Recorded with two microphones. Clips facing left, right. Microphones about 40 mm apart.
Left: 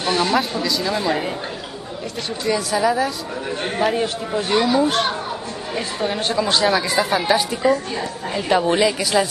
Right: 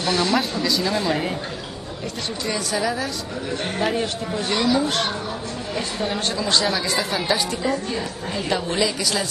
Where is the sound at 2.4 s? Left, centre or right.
Centre.